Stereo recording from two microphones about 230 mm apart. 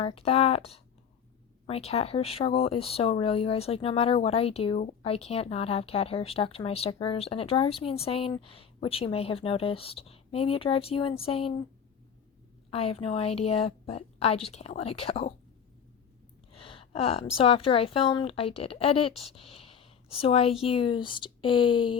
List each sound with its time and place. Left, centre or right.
0.0 s speech: left
12.7 s speech: left
16.5 s a woman's voice: left